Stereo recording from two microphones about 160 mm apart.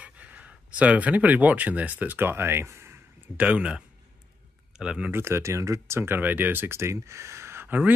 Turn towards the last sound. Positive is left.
turn(degrees=-10)  # may be behind; listen again after turning